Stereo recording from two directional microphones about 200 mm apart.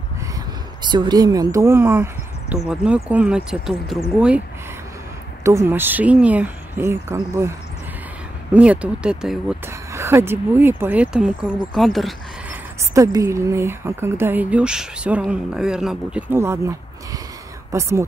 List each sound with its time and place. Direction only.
0.8 s speech: 20° right (ahead or behind); by 4.4 s 5° right (ahead or behind)
5.4 s speech: 15° right (ahead or behind)
8.5 s speech: 5° right (ahead or behind)
12.9 s speech: 15° right (ahead or behind)